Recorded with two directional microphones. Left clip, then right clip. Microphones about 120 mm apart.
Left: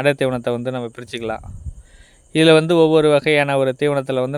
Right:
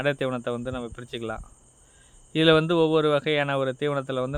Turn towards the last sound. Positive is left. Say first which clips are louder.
# left 8 dB
turn(degrees=40)  # may be behind; listen again after turning